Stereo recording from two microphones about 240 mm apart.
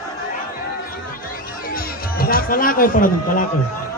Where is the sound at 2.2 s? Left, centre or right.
Left.